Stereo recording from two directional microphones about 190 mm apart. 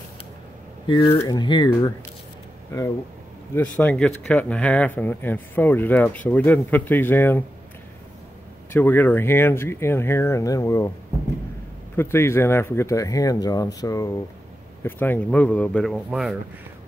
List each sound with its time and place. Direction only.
0.8 s speech: 25° left (ahead or behind)
3.5 s speech: 5° left (ahead or behind)
8.7 s speech: 10° left (ahead or behind)
12.0 s speech: 15° left (ahead or behind); by 16.3 s 5° right (ahead or behind)